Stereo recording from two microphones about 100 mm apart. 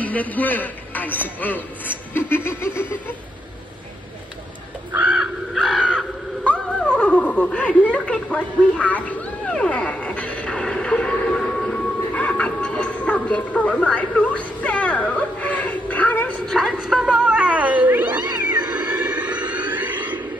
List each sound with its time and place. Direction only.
0.0 s speech: 15° left (ahead or behind)
4.9 s crow: 15° right (ahead or behind)
5.2 s crow: centre (ahead or behind)
5.9 s wail: 10° left (ahead or behind)
16.5 s cat: centre (ahead or behind); by 18.5 s 20° right (ahead or behind)
18.7 s a sound: 15° right (ahead or behind)